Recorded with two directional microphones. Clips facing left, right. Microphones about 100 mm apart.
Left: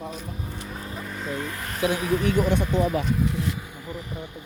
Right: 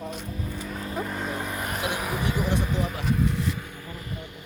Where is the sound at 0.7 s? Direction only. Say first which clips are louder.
Right 2 dB; 5° left (ahead or behind).